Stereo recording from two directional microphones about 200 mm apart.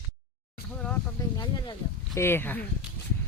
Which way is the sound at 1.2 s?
20° left (ahead or behind).